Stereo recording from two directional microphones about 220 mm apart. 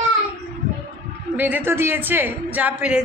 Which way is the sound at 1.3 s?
10° right (ahead or behind).